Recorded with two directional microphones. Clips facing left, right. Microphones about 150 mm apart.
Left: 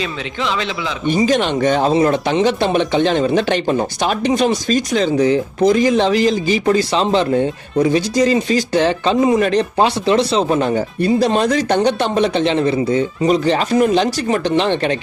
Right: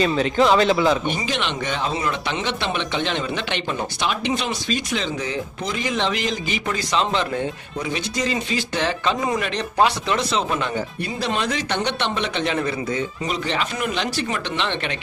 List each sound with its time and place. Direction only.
0.0 s a man's voice: 45° right (ahead or behind)
1.1 s speech: 40° left (ahead or behind)
12.4 s speech: 25° left (ahead or behind)